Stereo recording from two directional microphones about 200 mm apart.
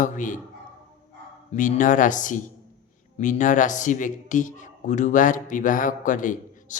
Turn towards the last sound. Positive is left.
turn(degrees=40)  # may be behind; listen again after turning